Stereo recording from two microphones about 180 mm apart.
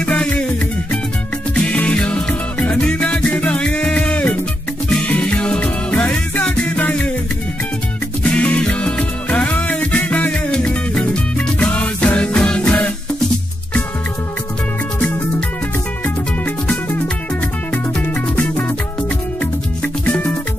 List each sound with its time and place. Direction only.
0.0 s music: 5° left (ahead or behind)
1.5 s music: 5° left (ahead or behind)
8.2 s music: 5° left (ahead or behind)
16.4 s music: 10° left (ahead or behind)